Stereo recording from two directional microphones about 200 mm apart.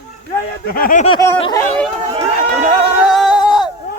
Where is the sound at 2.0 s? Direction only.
35° right (ahead or behind).